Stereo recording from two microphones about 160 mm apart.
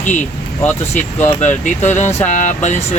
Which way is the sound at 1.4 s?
50° left (ahead or behind).